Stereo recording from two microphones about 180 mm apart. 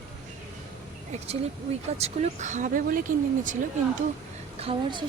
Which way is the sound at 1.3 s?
35° right (ahead or behind).